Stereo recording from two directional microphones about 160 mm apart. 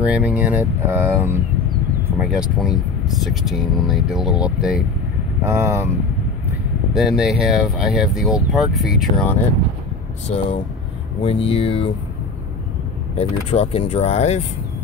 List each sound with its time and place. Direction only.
0.0 s speech: 10° right (ahead or behind)
5.4 s speech: 15° right (ahead or behind)
6.9 s speech: centre (ahead or behind)
11.2 s speech: 35° left (ahead or behind)
13.1 s speech: 40° left (ahead or behind)